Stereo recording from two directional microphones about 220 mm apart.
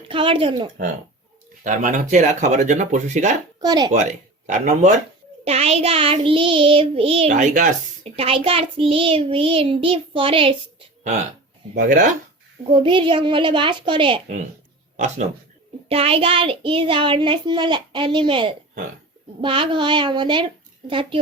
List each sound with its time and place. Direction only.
0.1 s child singing: 25° right (ahead or behind)
1.6 s speech: 35° right (ahead or behind)
3.6 s child singing: 20° right (ahead or behind)
4.4 s speech: 35° right (ahead or behind)
5.5 s child singing: 30° right (ahead or behind)
11.7 s speech: 35° right (ahead or behind)
12.7 s child singing: 25° right (ahead or behind)
14.9 s a man's voice: 30° right (ahead or behind)
15.9 s child singing: 25° right (ahead or behind)